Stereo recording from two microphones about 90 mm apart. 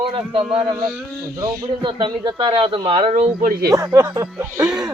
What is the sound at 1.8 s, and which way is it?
Speech, 60° right (ahead or behind).